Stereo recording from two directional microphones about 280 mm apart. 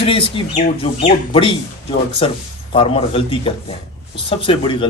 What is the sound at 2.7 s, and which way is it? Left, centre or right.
Speech, centre.